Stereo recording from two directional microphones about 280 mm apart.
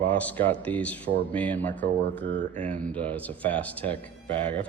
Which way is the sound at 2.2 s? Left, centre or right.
Right.